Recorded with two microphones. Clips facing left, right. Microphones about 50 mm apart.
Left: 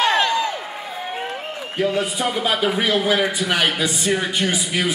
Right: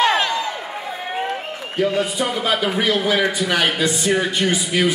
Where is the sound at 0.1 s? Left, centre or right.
Centre.